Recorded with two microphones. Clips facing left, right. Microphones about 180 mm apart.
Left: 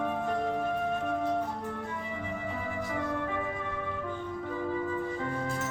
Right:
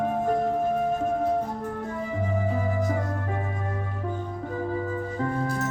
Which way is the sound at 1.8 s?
40° right (ahead or behind).